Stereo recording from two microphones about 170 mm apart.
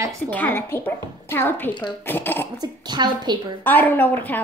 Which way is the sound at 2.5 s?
25° right (ahead or behind).